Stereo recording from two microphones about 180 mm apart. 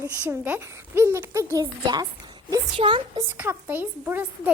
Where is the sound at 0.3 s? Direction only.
10° right (ahead or behind); by 3.2 s 30° right (ahead or behind).